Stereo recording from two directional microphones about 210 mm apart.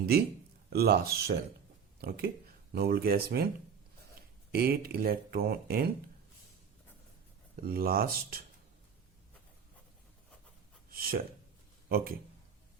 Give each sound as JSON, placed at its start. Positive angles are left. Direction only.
{"t": 0.7, "sound": "speech", "side_deg": -50}
{"t": 4.5, "sound": "speech", "side_deg": -45}
{"t": 7.6, "sound": "speech", "side_deg": -45}
{"t": 10.9, "sound": "speech", "side_deg": -45}